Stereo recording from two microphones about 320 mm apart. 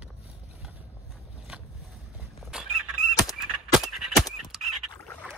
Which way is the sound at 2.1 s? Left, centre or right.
Centre.